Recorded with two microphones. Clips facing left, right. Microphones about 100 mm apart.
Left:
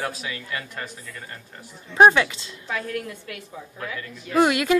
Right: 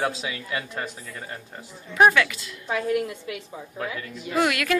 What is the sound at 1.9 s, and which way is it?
Speech, 25° left (ahead or behind).